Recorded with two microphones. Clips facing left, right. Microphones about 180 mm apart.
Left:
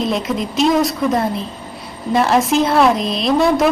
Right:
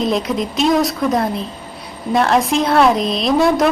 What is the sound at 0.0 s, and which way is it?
A woman's voice, centre (ahead or behind).